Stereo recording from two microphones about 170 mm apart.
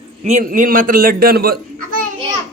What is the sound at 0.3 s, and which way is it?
A man's voice, 45° right (ahead or behind).